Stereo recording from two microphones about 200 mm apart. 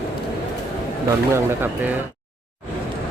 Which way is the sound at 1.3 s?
10° right (ahead or behind).